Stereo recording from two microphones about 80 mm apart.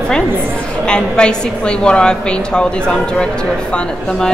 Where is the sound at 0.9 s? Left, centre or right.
Centre.